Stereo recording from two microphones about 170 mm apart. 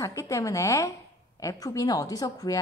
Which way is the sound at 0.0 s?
20° left (ahead or behind).